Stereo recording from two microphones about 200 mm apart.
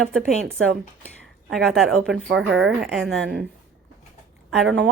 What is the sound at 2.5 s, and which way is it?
Speech, 65° right (ahead or behind).